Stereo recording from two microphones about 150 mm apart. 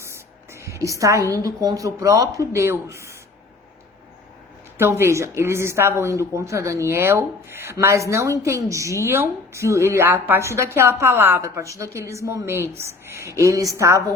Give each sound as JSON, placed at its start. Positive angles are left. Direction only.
{"t": 0.0, "sound": "a sound", "side_deg": -20}
{"t": 0.9, "sound": "a woman's voice", "side_deg": -20}
{"t": 4.8, "sound": "a woman's voice", "side_deg": -15}